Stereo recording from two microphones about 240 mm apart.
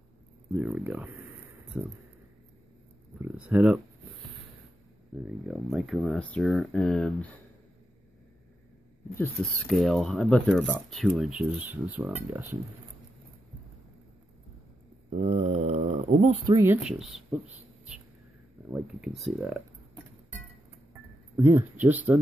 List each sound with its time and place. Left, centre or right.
0.5 s speech: centre
3.2 s speech: centre
5.1 s speech: centre
9.1 s speech: centre
15.0 s speech: right
16.5 s speech: centre
18.7 s speech: centre
20.9 s music: centre